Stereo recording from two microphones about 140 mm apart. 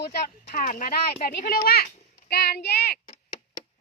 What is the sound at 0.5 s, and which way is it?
Speech, 80° left.